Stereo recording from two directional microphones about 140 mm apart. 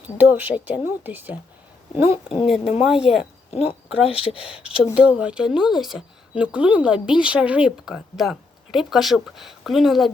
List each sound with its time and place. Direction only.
0.2 s speech: 15° right (ahead or behind)
2.0 s a woman's voice: 40° left (ahead or behind)
2.5 s speech: 5° right (ahead or behind)
3.5 s speech: 50° left (ahead or behind)
4.6 s speech: 5° right (ahead or behind)